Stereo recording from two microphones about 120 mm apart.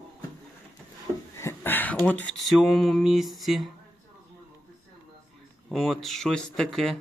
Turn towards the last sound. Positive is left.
turn(degrees=0)  # may be behind; listen again after turning